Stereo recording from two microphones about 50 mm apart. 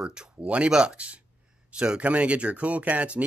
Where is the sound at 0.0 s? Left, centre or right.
Right.